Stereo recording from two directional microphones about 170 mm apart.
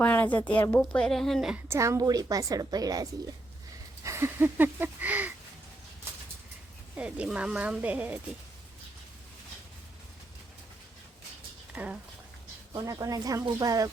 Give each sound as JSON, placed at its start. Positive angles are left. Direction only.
{"t": 0.0, "sound": "a woman's voice", "side_deg": 10}
{"t": 6.9, "sound": "a woman's voice", "side_deg": -5}
{"t": 11.7, "sound": "speech", "side_deg": -10}
{"t": 12.7, "sound": "speech", "side_deg": -20}